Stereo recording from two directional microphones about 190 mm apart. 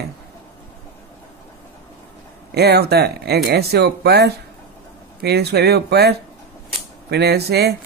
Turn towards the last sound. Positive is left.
turn(degrees=-60)  # may be behind; listen again after turning